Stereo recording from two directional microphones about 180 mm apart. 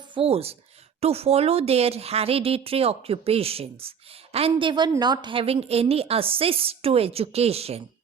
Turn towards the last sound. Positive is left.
turn(degrees=-35)  # may be behind; listen again after turning